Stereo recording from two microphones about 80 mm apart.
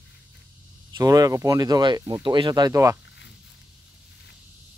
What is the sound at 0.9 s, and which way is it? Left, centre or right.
Speech, right.